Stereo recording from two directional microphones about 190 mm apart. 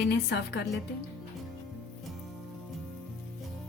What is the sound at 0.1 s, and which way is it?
Speech, 60° left (ahead or behind).